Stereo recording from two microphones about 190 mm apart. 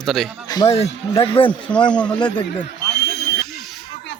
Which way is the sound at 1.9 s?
5° left (ahead or behind).